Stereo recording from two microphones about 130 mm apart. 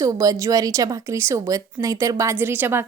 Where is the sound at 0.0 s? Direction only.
25° right (ahead or behind).